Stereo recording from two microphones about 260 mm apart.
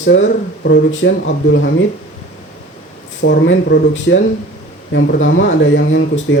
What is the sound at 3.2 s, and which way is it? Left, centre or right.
Speech, left.